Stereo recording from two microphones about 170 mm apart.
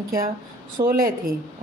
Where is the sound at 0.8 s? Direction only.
55° right (ahead or behind).